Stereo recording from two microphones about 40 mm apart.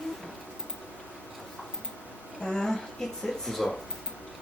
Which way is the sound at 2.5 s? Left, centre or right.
Centre.